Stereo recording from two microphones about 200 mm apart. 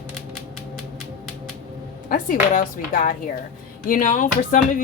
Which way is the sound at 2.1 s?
40° left (ahead or behind).